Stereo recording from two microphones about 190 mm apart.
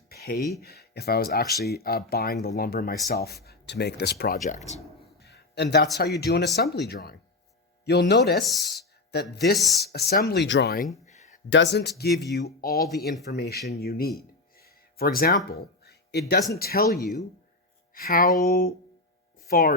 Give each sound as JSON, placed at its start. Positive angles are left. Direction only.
{"t": 0.1, "sound": "a sound", "side_deg": 55}
{"t": 0.6, "sound": "speech", "side_deg": 55}
{"t": 4.4, "sound": "speech", "side_deg": 35}
{"t": 5.2, "sound": "a sound", "side_deg": 60}
{"t": 6.0, "sound": "speech", "side_deg": 55}
{"t": 8.4, "sound": "speech", "side_deg": 0}
{"t": 9.3, "sound": "speech", "side_deg": 60}
{"t": 9.6, "sound": "speech", "side_deg": 0}
{"t": 9.8, "sound": "speech", "side_deg": 55}
{"t": 11.0, "sound": "a sound", "side_deg": 40}
{"t": 11.4, "sound": "speech", "side_deg": 70}
{"t": 17.9, "sound": "music", "side_deg": 50}
{"t": 19.5, "sound": "speech", "side_deg": 50}